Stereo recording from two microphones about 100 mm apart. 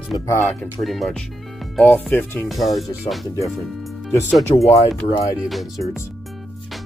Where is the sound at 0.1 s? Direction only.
50° left (ahead or behind).